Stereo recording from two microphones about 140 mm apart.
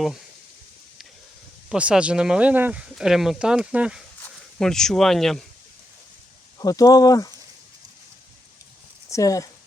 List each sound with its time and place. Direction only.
1.7 s speech: 10° right (ahead or behind)
4.6 s speech: 5° left (ahead or behind)
6.6 s speech: 25° left (ahead or behind)
9.0 s speech: 25° left (ahead or behind)